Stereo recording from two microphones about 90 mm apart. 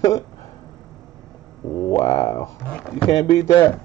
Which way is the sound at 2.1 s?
45° left (ahead or behind).